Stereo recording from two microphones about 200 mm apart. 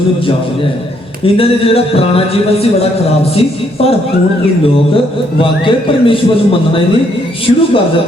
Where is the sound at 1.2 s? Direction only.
30° left (ahead or behind).